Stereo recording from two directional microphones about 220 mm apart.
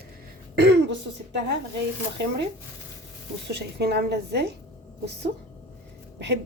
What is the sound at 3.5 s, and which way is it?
Speech, 50° right (ahead or behind).